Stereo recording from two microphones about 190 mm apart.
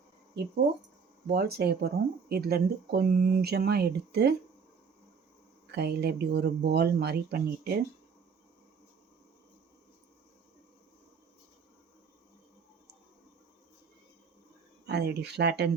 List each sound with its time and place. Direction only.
1.3 s speech: 55° right (ahead or behind)
5.7 s speech: 60° right (ahead or behind)
14.8 s speech: 60° right (ahead or behind)